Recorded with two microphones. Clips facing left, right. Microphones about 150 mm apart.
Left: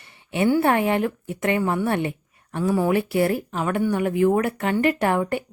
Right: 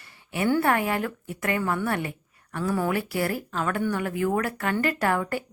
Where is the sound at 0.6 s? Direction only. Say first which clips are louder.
Left 4 dB; 25° left (ahead or behind).